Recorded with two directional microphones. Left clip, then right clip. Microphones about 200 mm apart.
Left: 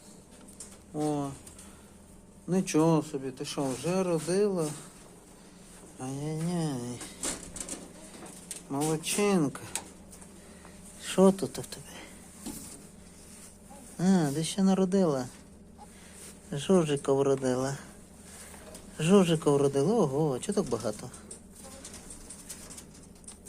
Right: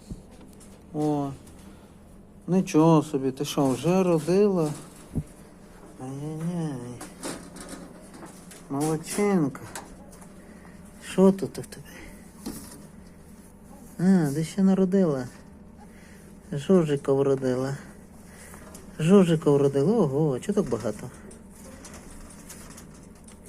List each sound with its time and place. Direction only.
0.9 s speech: centre (ahead or behind)
2.5 s speech: centre (ahead or behind)
2.9 s speech: 20° right (ahead or behind)
6.0 s a sound: 30° left (ahead or behind)
8.7 s speech: 10° left (ahead or behind)
11.0 s speech: 5° left (ahead or behind)
14.0 s speech: centre (ahead or behind)
16.5 s speech: centre (ahead or behind)
18.9 s speech: centre (ahead or behind)